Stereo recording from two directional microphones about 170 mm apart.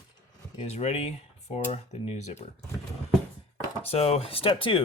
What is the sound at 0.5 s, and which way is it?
Speech, 40° left (ahead or behind).